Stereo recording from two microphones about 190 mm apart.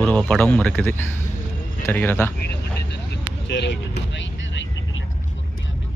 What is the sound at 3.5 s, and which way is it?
Speech, 65° left (ahead or behind).